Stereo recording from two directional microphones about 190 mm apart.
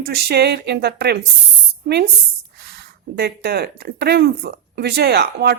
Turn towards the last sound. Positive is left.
turn(degrees=-60)  # may be behind; listen again after turning